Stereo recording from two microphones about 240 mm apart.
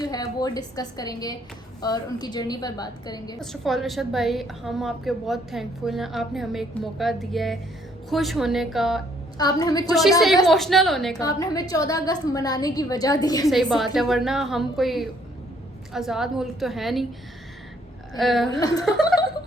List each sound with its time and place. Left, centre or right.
0.0 s a woman's voice: centre
3.4 s a woman's voice: centre
9.4 s a woman's voice: centre
9.9 s a woman's voice: centre
11.2 s a woman's voice: centre
13.5 s a woman's voice: centre
18.2 s a woman's voice: centre
18.6 s a woman's voice: centre